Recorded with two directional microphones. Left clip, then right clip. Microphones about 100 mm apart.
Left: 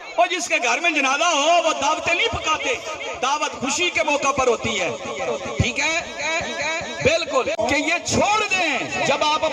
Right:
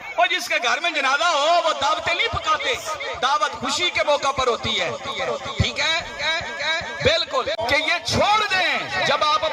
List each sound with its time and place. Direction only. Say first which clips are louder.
0.2 s a man's voice: left 1 dB; 35° left (ahead or behind)
5.6 s a sound: even; 30° left (ahead or behind)
7.6 s a man's voice: even; 35° left (ahead or behind)